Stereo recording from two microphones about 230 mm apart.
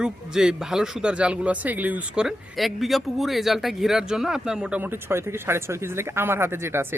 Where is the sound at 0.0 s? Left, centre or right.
Centre.